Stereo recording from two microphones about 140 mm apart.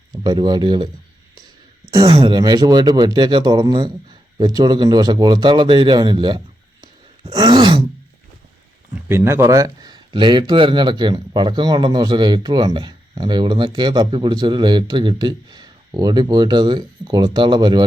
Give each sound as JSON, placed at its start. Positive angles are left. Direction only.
{"t": 0.1, "sound": "speech", "side_deg": -30}
{"t": 2.0, "sound": "speech", "side_deg": -40}
{"t": 9.0, "sound": "speech", "side_deg": -15}